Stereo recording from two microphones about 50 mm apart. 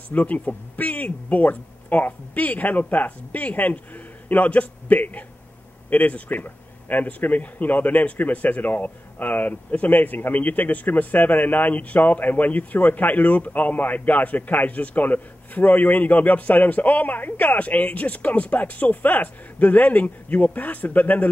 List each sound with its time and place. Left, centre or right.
0.1 s speech: left